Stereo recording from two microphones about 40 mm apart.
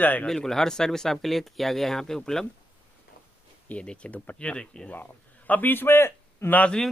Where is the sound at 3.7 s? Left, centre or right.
Left.